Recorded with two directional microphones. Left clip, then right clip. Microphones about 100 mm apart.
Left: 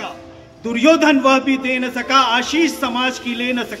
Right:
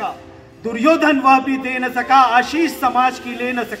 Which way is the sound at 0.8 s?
45° left (ahead or behind).